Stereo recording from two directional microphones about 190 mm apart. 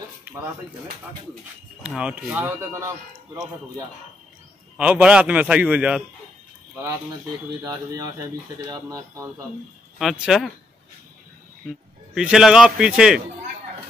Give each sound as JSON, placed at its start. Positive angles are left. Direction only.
{"t": 1.8, "sound": "a man's voice", "side_deg": -5}
{"t": 7.6, "sound": "a man's voice", "side_deg": -20}
{"t": 9.9, "sound": "a man's voice", "side_deg": 0}
{"t": 12.1, "sound": "a man's voice", "side_deg": 0}